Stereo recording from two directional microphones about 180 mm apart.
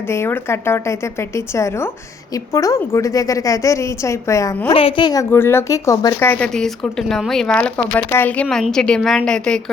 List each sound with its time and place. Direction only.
0.1 s speech: 15° left (ahead or behind)
4.7 s a woman's voice: 30° left (ahead or behind)
5.3 s a woman's voice: 15° left (ahead or behind)